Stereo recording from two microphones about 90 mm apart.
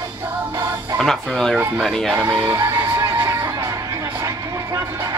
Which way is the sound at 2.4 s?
30° right (ahead or behind).